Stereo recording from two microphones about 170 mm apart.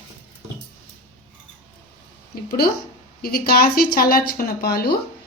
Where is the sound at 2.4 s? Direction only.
65° left (ahead or behind).